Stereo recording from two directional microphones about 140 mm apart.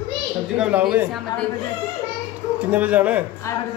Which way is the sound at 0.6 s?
10° right (ahead or behind).